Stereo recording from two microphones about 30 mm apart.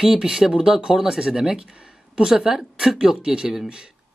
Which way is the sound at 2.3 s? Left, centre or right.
Right.